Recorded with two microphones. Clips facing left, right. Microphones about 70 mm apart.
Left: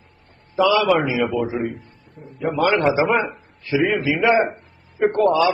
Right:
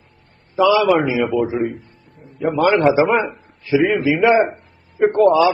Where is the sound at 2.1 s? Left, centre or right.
Left.